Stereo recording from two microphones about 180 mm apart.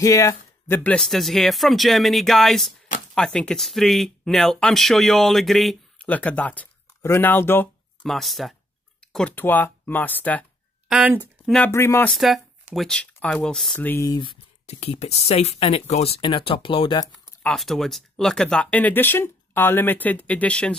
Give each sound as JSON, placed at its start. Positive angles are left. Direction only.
{"t": 0.0, "sound": "speech", "side_deg": 20}
{"t": 10.9, "sound": "speech", "side_deg": -10}
{"t": 11.5, "sound": "speech", "side_deg": 10}
{"t": 12.1, "sound": "speech", "side_deg": 0}
{"t": 17.2, "sound": "speech", "side_deg": 0}